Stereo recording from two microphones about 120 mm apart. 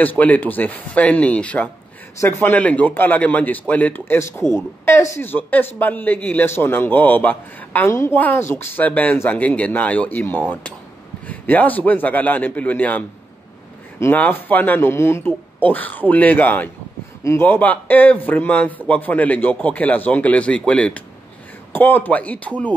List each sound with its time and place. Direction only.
0.0 s a man's voice: 15° left (ahead or behind)